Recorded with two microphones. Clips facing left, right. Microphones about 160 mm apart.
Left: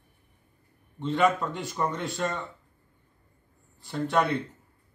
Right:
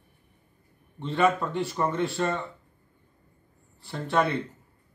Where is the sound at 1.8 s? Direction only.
Centre (ahead or behind).